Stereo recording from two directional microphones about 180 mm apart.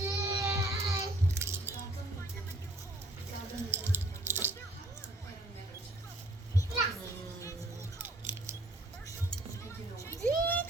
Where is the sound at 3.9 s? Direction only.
10° right (ahead or behind).